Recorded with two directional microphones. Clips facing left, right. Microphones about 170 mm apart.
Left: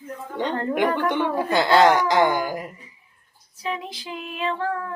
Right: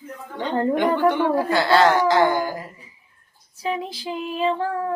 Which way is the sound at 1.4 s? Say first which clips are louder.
Left 3 dB; 20° left (ahead or behind).